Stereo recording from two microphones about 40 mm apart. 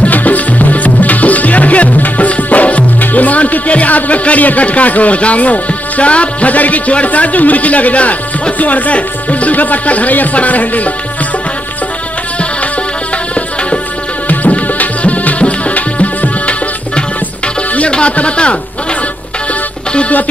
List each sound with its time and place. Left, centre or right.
0.0 s music: left
14.3 s music: left
17.7 s speech: left